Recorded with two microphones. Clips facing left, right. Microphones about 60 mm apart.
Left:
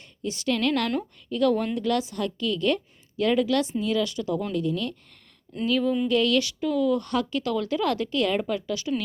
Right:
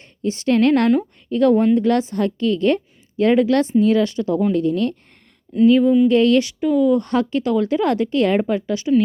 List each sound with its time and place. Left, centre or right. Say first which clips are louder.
0.0 s a woman's voice: right 7 dB; right
5.6 s speech: right 11 dB; right